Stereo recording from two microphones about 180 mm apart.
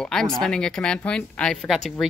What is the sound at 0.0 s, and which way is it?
A woman's voice, centre (ahead or behind).